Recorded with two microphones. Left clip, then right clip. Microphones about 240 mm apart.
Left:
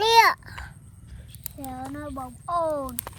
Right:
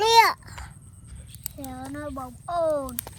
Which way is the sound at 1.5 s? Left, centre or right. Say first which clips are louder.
Left 2 dB; left.